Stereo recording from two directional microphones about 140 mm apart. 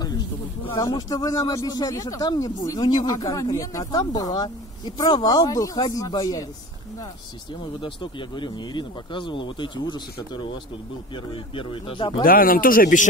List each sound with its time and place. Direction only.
0.7 s speech: 25° left (ahead or behind)
7.6 s speech: 35° left (ahead or behind)
12.2 s speech: 90° left